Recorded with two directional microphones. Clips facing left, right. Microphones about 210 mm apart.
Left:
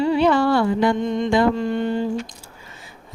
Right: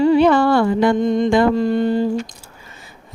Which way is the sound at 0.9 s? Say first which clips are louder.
Right 4 dB; 40° right (ahead or behind).